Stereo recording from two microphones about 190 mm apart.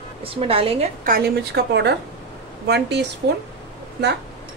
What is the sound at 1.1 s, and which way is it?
A woman's voice, 55° right (ahead or behind).